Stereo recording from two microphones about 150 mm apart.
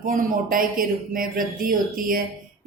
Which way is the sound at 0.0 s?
65° right (ahead or behind).